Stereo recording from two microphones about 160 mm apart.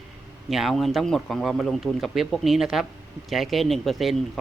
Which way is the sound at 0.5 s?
Centre (ahead or behind).